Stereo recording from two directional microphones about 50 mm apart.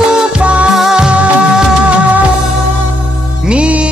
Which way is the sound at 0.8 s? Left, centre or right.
Centre.